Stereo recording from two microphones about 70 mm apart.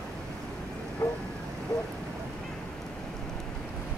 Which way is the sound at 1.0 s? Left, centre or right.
Left.